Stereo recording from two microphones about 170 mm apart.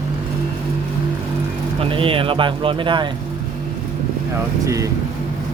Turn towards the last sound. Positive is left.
turn(degrees=-20)  # may be behind; listen again after turning